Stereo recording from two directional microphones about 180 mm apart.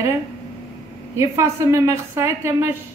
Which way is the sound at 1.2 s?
15° right (ahead or behind).